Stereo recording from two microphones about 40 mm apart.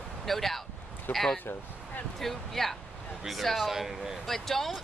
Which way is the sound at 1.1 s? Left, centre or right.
Left.